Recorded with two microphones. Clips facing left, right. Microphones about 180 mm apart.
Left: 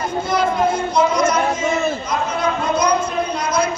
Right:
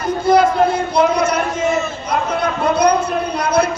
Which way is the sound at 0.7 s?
60° right (ahead or behind).